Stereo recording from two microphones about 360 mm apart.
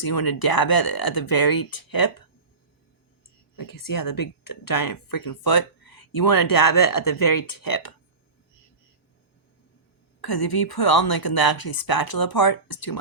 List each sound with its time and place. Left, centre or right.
0.0 s a woman's voice: left
3.5 s speech: left
10.2 s a woman's voice: left